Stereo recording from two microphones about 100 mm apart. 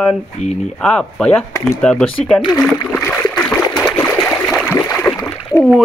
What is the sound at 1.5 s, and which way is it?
Speech, 30° left (ahead or behind).